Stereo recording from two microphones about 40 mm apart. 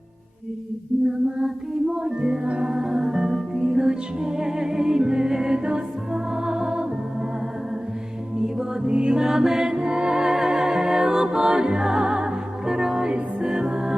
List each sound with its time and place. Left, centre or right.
1.4 s music: centre
2.7 s music: centre
8.9 s music: right
9.2 s mantra: centre
9.7 s music: right